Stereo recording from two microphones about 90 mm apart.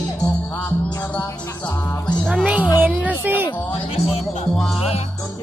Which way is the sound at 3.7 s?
90° left.